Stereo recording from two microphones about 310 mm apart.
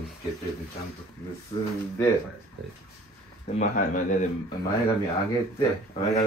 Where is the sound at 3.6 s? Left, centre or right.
Left.